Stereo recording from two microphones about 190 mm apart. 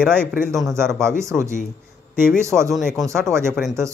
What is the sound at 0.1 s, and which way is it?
Speech, 10° right (ahead or behind).